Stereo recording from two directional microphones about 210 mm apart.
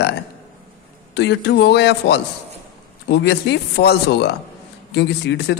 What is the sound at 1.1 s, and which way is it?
A man's voice, 55° left (ahead or behind).